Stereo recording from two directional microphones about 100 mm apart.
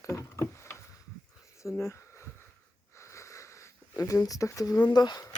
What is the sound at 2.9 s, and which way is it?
Sniff, 30° left (ahead or behind).